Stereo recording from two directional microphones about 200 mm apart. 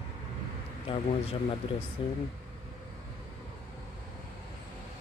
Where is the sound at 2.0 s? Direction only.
25° left (ahead or behind).